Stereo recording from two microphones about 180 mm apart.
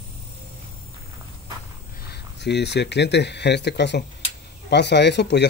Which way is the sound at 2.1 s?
70° left (ahead or behind).